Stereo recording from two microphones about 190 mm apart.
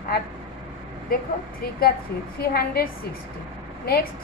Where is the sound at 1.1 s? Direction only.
50° left (ahead or behind).